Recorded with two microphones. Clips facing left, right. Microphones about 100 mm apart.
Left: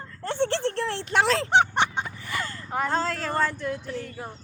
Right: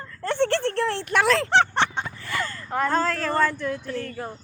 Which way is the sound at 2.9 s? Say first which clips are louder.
Right 4 dB; 45° right (ahead or behind).